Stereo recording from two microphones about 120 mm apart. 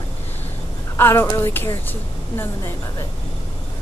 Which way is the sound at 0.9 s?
20° left (ahead or behind).